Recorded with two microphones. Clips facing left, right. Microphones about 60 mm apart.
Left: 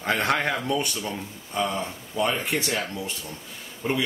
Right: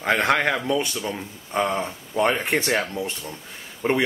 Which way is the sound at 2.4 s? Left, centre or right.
Right.